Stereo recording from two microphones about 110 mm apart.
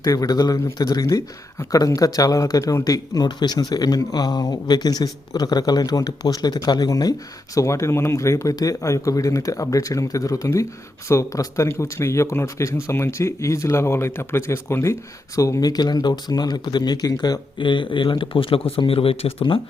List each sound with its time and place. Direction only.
0.0 s speech: 35° left (ahead or behind); by 19.5 s 55° left (ahead or behind)